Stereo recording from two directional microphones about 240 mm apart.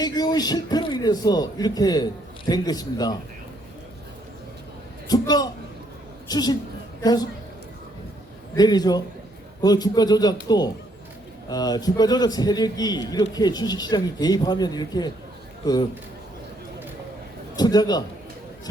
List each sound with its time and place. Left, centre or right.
0.0 s a man's voice: centre
5.0 s a man's voice: centre
8.5 s a man's voice: centre
17.6 s a man's voice: centre